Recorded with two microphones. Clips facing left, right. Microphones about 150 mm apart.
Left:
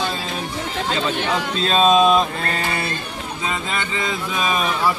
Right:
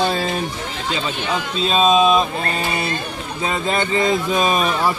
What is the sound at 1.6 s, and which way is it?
Speech, 5° right (ahead or behind).